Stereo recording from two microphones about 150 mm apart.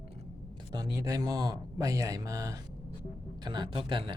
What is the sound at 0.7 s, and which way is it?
Speech, 25° right (ahead or behind).